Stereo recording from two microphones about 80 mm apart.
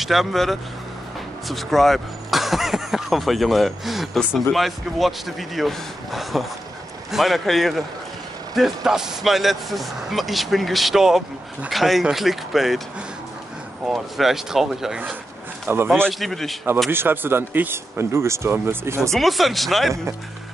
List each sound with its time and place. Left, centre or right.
0.0 s speech: centre
13.8 s speech: centre
15.7 s speech: right
16.1 s speech: centre
16.9 s speech: right
18.9 s speech: centre